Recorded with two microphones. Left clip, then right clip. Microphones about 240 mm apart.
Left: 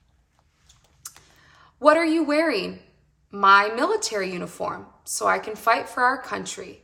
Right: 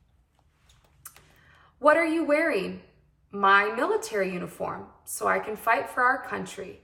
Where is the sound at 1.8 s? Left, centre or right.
Centre.